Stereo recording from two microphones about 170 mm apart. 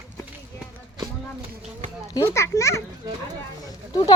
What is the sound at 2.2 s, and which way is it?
A child's voice, 15° left (ahead or behind).